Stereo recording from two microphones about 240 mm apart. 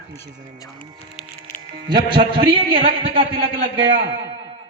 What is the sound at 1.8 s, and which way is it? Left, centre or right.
A man's voice, centre.